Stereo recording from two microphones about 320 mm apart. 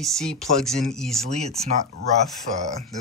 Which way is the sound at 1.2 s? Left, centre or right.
Centre.